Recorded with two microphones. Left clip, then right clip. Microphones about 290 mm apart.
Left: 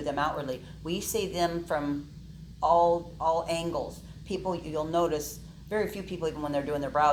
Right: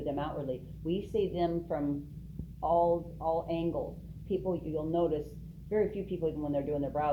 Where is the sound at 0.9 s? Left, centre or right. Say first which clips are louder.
Left 1 dB; centre.